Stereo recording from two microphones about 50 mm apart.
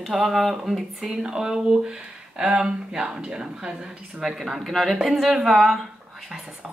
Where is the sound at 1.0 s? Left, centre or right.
Centre.